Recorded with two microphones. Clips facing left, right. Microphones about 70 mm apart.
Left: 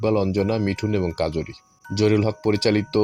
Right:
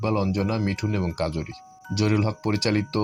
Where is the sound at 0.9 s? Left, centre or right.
Left.